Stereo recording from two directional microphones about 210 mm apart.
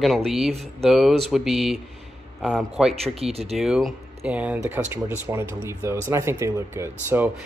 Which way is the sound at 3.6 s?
Centre (ahead or behind).